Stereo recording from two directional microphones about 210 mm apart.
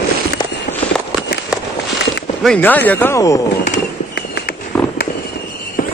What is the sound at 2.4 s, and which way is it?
Speech, 5° left (ahead or behind).